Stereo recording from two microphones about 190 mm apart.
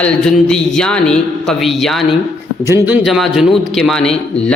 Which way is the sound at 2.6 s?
10° right (ahead or behind).